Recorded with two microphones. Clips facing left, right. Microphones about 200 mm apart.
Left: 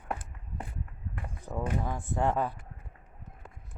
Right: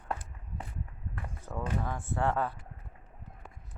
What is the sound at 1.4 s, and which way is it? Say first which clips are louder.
Speech: left 2 dB; 15° left (ahead or behind).